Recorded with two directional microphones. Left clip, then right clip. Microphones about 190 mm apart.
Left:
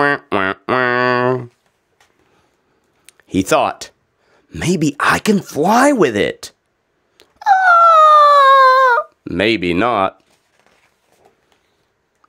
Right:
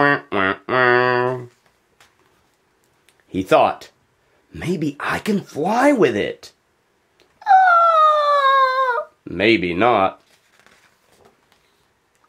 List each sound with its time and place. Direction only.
0.0 s music: 45° left (ahead or behind)
3.1 s a sound: 50° left (ahead or behind)
4.5 s speech: 45° left (ahead or behind)
7.2 s dog: 50° left (ahead or behind)